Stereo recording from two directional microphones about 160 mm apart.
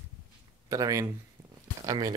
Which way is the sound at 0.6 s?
20° right (ahead or behind).